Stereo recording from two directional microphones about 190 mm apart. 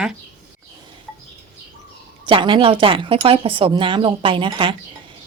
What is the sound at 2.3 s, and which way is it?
A woman's voice, 25° right (ahead or behind).